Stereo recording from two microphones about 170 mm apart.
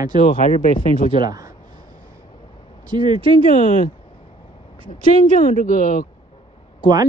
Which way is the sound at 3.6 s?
55° left (ahead or behind).